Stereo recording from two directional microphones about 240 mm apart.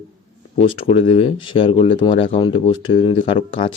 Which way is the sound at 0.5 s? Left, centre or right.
Left.